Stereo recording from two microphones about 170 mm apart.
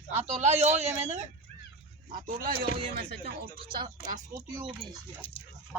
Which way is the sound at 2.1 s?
55° right (ahead or behind).